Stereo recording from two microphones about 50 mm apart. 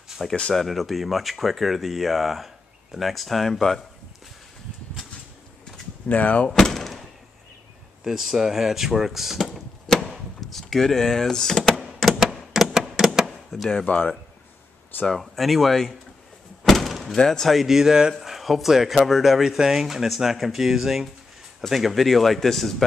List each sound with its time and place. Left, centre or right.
0.2 s speech: centre
6.0 s speech: left
6.5 s door: centre
8.0 s speech: centre
12.0 s typewriter: centre
13.6 s speech: centre
13.8 s speech: left
15.0 s speech: centre
16.6 s door: centre
17.2 s speech: centre
17.5 s speech: centre